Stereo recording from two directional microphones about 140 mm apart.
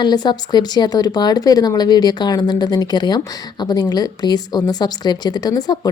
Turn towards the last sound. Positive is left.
turn(degrees=30)  # may be behind; listen again after turning